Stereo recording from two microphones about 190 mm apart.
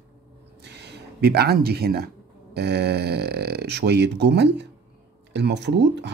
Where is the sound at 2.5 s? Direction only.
60° right (ahead or behind).